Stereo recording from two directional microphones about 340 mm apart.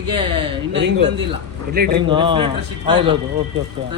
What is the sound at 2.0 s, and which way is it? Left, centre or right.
A man's voice, centre.